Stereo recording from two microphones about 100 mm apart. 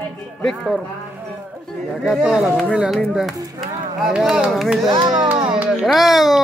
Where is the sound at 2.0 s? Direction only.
5° right (ahead or behind).